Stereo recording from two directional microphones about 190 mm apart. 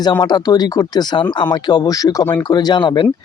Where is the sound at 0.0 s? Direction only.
20° left (ahead or behind).